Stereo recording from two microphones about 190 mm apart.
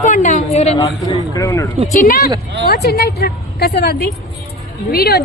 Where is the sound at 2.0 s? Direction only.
50° left (ahead or behind).